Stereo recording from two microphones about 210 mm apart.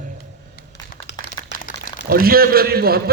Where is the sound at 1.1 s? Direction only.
55° left (ahead or behind).